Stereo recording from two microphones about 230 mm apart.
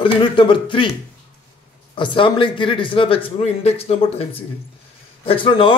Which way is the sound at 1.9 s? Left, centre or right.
Left.